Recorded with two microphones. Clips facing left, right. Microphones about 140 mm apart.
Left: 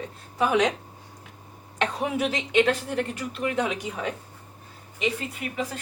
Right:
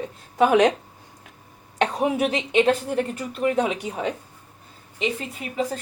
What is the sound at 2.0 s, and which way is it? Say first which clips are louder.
A woman's voice: right 5 dB; 25° right (ahead or behind).